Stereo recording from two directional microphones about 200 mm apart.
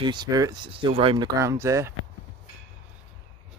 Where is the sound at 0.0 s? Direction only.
20° right (ahead or behind).